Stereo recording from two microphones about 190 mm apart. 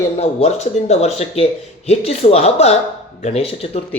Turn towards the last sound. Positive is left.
turn(degrees=30)  # may be behind; listen again after turning